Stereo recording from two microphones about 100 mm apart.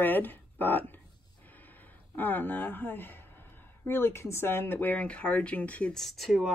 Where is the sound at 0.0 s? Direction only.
20° left (ahead or behind).